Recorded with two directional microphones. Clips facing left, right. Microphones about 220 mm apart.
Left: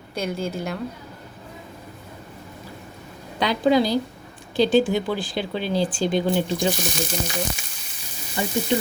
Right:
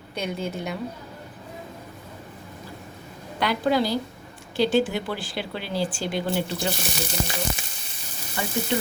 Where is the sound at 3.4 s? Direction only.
15° left (ahead or behind).